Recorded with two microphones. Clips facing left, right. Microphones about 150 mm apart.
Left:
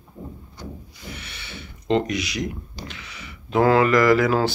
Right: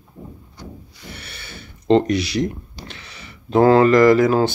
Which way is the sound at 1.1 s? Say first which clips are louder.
Even; 35° right (ahead or behind).